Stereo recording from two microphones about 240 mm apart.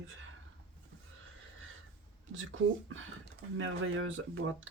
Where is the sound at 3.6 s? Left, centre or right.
Right.